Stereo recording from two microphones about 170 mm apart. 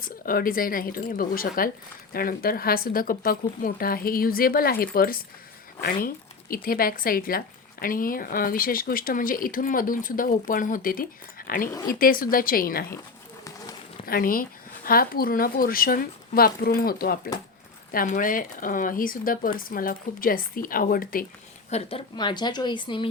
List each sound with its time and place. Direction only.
0.0 s a woman's voice: 55° left (ahead or behind)
14.0 s a woman's voice: 60° left (ahead or behind)
21.7 s speech: 35° left (ahead or behind)